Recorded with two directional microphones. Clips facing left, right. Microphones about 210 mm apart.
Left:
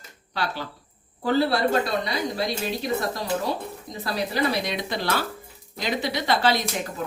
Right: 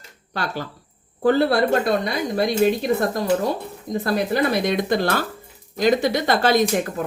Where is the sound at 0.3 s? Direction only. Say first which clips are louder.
Right 2 dB; 50° right (ahead or behind).